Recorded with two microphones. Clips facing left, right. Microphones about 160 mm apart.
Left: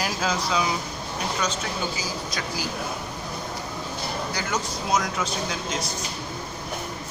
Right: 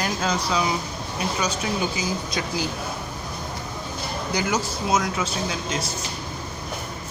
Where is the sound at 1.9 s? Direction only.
25° right (ahead or behind).